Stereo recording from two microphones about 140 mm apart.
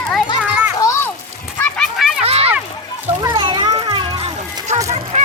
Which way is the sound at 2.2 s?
45° right (ahead or behind).